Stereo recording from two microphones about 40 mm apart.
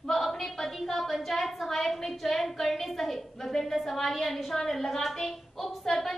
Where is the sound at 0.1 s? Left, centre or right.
Centre.